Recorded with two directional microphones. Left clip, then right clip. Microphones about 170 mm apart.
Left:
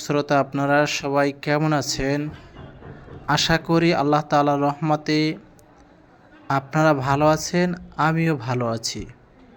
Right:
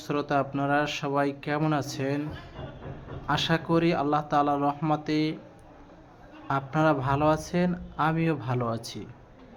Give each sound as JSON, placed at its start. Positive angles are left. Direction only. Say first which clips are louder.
{"t": 0.0, "sound": "speech", "louder": "left 7 dB", "side_deg": 30}
{"t": 3.2, "sound": "speech", "louder": "left 6 dB", "side_deg": 30}
{"t": 6.5, "sound": "speech", "louder": "left 6 dB", "side_deg": 25}